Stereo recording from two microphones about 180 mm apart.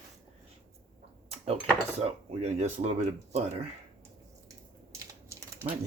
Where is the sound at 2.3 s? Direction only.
40° right (ahead or behind).